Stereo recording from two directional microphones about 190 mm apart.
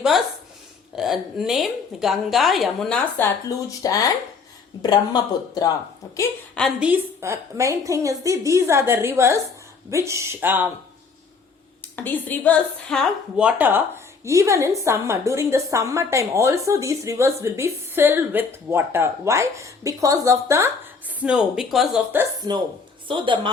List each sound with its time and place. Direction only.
0.9 s a woman's voice: centre (ahead or behind)
3.8 s speech: 20° left (ahead or behind)
6.5 s a woman's voice: centre (ahead or behind)
11.8 s a woman's voice: 10° left (ahead or behind); by 20.7 s 15° right (ahead or behind)
21.2 s a woman's voice: 5° right (ahead or behind)
23.0 s a woman's voice: 25° right (ahead or behind)